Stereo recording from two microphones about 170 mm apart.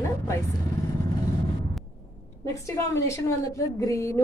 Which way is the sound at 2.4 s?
15° left (ahead or behind).